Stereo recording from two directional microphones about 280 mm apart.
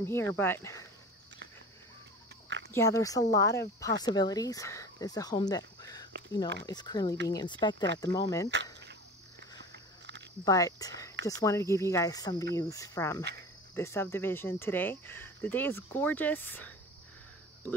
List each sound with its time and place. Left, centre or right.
0.0 s speech: centre
2.7 s speech: centre
9.4 s a sound: right
10.4 s speech: centre